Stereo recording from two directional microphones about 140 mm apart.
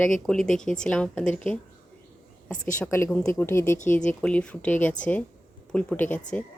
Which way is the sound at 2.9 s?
20° left (ahead or behind).